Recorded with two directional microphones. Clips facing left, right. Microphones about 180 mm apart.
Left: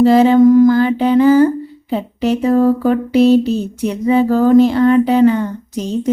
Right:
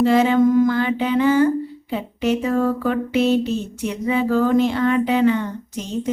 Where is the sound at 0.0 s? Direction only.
35° left (ahead or behind).